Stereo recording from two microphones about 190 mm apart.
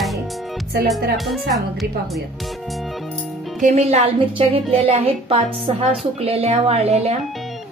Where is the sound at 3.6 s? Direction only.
35° right (ahead or behind).